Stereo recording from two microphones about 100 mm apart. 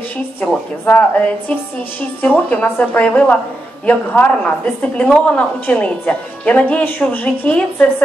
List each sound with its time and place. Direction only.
0.4 s a woman's voice: 20° left (ahead or behind)